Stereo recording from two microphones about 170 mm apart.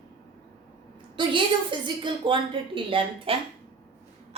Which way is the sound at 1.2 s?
30° right (ahead or behind).